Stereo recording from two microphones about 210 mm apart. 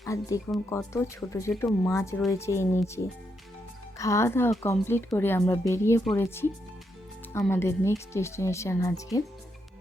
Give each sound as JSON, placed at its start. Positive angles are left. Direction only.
{"t": 0.0, "sound": "speech", "side_deg": 15}